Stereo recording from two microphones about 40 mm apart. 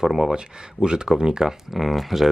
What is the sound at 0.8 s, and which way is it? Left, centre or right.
Speech, right.